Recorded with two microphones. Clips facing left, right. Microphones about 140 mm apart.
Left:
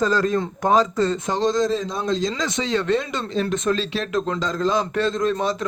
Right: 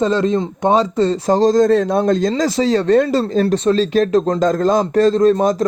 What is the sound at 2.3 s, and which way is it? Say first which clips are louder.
A man's voice: right 8 dB; 30° right (ahead or behind).